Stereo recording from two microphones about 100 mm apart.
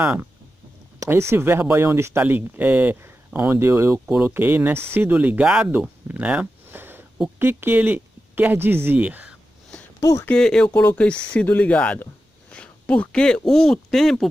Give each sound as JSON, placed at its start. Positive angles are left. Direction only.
{"t": 0.0, "sound": "speech", "side_deg": -15}
{"t": 0.9, "sound": "a sound", "side_deg": -35}
{"t": 1.3, "sound": "speech", "side_deg": -25}
{"t": 5.7, "sound": "a sound", "side_deg": -15}
{"t": 7.3, "sound": "speech", "side_deg": -20}
{"t": 9.9, "sound": "speech", "side_deg": 30}
{"t": 10.3, "sound": "speech", "side_deg": 5}
{"t": 10.7, "sound": "speech", "side_deg": 20}